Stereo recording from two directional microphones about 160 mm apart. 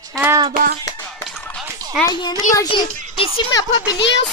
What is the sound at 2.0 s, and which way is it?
Speech, 25° left (ahead or behind).